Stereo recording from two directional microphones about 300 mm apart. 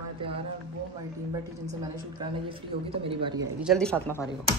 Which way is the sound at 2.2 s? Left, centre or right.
Centre.